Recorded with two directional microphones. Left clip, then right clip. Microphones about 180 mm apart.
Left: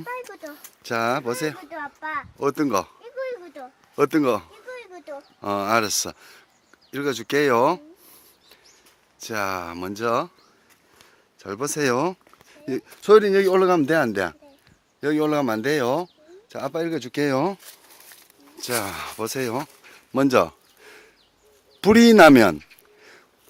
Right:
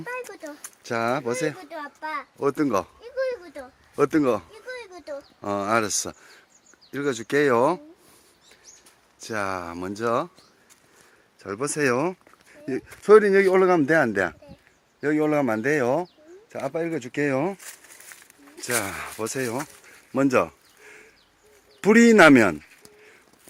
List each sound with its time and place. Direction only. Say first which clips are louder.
0.0 s a sound: even; 5° right (ahead or behind)
0.5 s speech: left 2 dB; 5° left (ahead or behind)
1.7 s a child's voice: left 2 dB; 55° right (ahead or behind)
2.4 s speech: left 1 dB; 5° left (ahead or behind)
3.9 s speech: left 1 dB; 10° left (ahead or behind)
4.7 s a sound: right 1 dB; 25° right (ahead or behind)
5.4 s speech: left 2 dB; 10° left (ahead or behind)
9.1 s speech: left 2 dB; 5° left (ahead or behind)
11.3 s speech: even; 10° left (ahead or behind)
18.5 s speech: even; 5° left (ahead or behind)
20.4 s a sound: left 3 dB; 20° left (ahead or behind)
21.8 s speech: left 2 dB; 15° left (ahead or behind)